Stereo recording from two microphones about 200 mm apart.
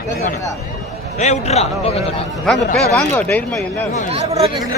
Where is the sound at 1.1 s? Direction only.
35° left (ahead or behind).